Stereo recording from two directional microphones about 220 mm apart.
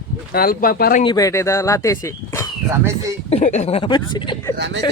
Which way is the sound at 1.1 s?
15° left (ahead or behind).